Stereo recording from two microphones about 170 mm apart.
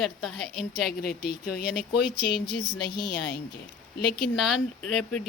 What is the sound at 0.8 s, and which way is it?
Speech, 65° left (ahead or behind).